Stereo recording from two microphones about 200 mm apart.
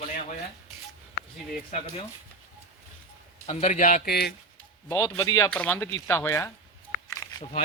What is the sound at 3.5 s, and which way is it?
Speech, 35° left (ahead or behind).